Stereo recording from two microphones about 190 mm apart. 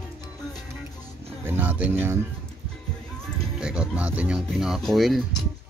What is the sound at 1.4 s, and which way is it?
Speech, 10° right (ahead or behind).